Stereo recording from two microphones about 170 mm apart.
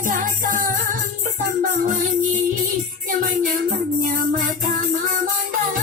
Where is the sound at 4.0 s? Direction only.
55° right (ahead or behind).